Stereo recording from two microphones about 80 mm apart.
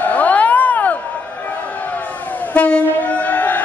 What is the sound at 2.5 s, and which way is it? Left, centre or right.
Train, centre.